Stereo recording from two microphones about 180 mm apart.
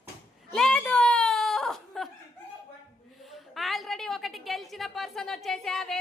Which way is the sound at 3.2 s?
Centre (ahead or behind).